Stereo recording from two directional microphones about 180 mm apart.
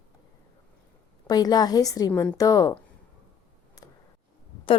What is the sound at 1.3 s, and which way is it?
Speech, 20° left (ahead or behind).